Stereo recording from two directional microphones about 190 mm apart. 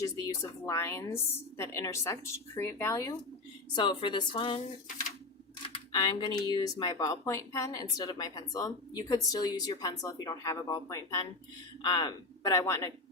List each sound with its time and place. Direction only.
0.0 s a woman's voice: 15° left (ahead or behind)
5.6 s a woman's voice: 25° left (ahead or behind)